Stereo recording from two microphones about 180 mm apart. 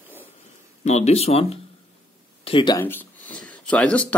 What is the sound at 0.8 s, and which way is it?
Speech, 35° left (ahead or behind).